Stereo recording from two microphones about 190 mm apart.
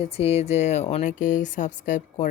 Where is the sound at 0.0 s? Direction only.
30° left (ahead or behind).